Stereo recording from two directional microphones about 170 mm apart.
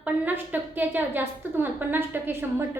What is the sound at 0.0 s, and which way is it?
A woman's voice, 10° right (ahead or behind).